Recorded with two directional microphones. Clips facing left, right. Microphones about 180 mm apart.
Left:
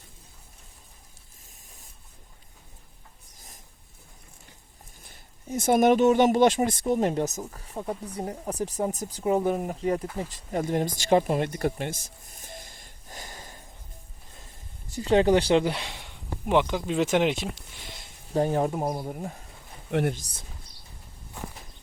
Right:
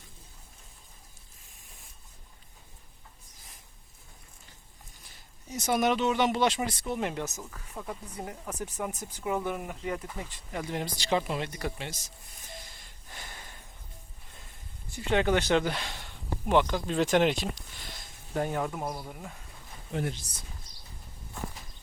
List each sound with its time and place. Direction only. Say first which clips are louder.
5.0 s speech: left 8 dB; 55° left (ahead or behind)
14.8 s speech: left 6 dB; 35° left (ahead or behind)
15.9 s speech: even; 10° left (ahead or behind)
18.3 s speech: left 6 dB; 30° left (ahead or behind)
19.9 s speech: left 7 dB; 70° left (ahead or behind)